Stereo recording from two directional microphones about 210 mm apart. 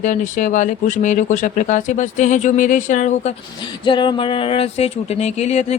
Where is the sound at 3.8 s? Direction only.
25° left (ahead or behind).